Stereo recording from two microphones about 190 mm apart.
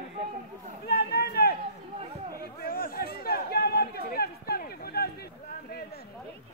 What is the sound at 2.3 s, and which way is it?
Chatter, 50° left (ahead or behind).